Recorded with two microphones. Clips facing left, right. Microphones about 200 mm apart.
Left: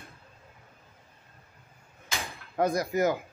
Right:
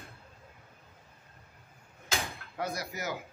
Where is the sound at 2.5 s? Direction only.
50° left (ahead or behind).